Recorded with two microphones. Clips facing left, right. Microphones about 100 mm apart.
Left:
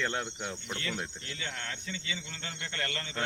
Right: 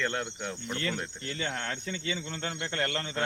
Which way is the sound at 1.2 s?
45° right (ahead or behind).